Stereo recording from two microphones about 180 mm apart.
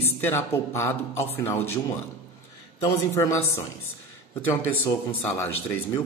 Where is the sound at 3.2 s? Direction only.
15° left (ahead or behind).